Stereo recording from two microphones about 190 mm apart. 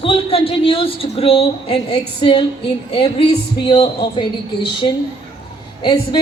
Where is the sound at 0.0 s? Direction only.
30° left (ahead or behind).